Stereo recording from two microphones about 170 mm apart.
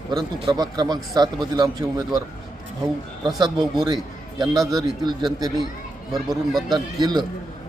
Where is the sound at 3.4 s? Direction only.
25° right (ahead or behind).